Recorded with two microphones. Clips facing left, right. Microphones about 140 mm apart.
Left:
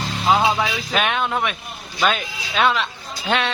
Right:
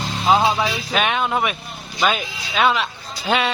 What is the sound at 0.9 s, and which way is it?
Speech, centre (ahead or behind).